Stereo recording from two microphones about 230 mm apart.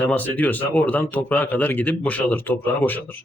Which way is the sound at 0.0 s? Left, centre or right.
Centre.